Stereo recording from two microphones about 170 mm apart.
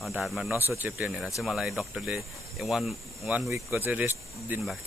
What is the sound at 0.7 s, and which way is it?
Speech, 10° right (ahead or behind).